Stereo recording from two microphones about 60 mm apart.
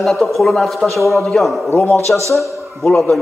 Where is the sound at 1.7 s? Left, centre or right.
Left.